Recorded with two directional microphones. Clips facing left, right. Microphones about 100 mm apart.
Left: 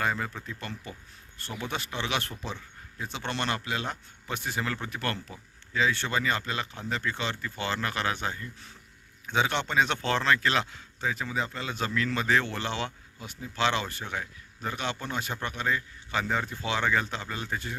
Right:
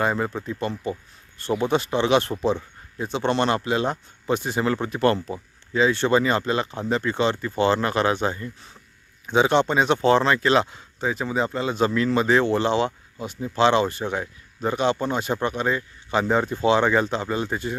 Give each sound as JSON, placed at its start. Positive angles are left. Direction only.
{"t": 0.0, "sound": "speech", "side_deg": -25}